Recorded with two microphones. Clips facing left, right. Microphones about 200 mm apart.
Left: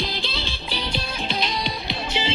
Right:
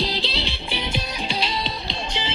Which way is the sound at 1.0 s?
10° right (ahead or behind).